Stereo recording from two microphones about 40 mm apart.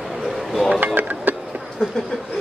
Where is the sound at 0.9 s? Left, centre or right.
Right.